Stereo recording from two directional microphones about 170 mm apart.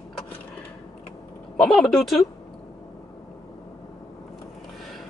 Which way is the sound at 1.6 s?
Centre (ahead or behind).